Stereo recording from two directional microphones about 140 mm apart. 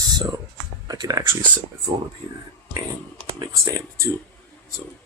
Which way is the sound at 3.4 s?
25° right (ahead or behind).